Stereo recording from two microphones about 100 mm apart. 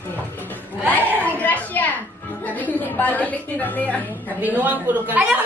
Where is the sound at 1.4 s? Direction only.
15° left (ahead or behind).